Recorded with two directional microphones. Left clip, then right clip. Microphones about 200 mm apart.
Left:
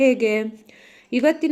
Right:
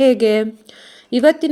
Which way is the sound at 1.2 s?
20° right (ahead or behind).